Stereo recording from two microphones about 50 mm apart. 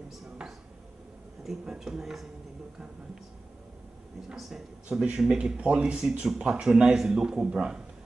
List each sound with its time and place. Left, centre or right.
1.8 s speech: centre
4.9 s speech: centre
5.2 s speech: centre